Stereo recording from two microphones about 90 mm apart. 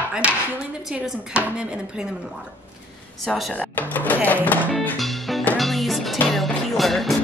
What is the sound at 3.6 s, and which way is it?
Speech, 20° left (ahead or behind).